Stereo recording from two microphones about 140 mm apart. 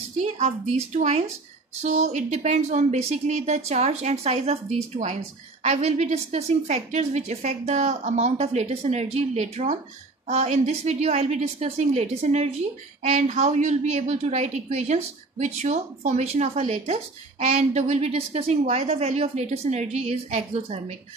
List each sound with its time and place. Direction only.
0.2 s a woman's voice: 50° right (ahead or behind)